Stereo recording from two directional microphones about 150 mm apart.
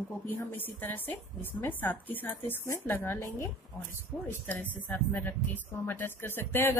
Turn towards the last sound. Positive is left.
turn(degrees=15)  # may be behind; listen again after turning